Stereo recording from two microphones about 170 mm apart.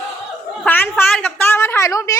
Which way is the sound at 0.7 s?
10° left (ahead or behind).